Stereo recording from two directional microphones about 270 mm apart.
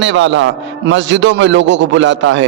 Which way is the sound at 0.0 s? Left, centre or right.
Right.